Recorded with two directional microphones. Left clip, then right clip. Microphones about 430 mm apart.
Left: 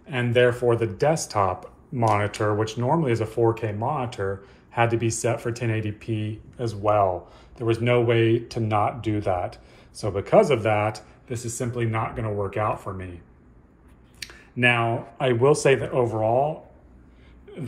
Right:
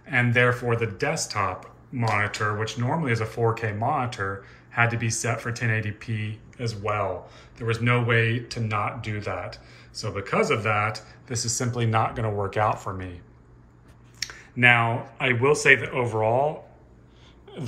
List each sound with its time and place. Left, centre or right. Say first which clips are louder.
0.0 s speech: left 1 dB; centre
14.2 s speech: right 2 dB; centre